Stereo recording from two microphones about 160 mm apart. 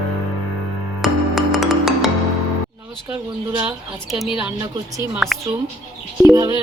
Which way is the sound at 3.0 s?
10° right (ahead or behind).